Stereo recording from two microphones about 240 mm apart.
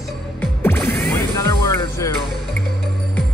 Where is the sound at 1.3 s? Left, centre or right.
Centre.